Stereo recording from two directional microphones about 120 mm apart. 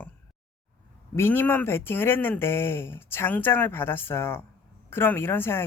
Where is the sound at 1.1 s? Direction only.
20° left (ahead or behind).